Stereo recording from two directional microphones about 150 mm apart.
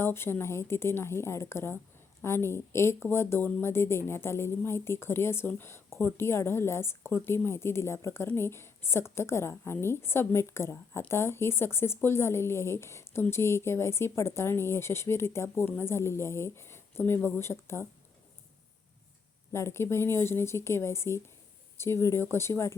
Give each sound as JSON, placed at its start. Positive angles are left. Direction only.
{"t": 0.0, "sound": "speech", "side_deg": 15}
{"t": 19.5, "sound": "speech", "side_deg": 15}